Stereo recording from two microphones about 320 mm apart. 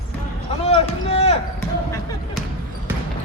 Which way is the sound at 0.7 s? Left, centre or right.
Centre.